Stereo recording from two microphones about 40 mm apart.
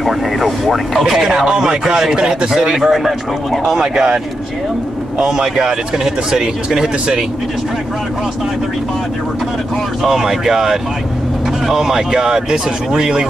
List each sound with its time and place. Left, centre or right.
0.0 s speech: centre; by 2.7 s right
2.7 s speech: centre
3.7 s speech: centre
5.2 s speech: centre
10.0 s speech: centre